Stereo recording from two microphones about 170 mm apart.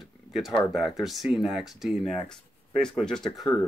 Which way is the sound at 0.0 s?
Centre (ahead or behind).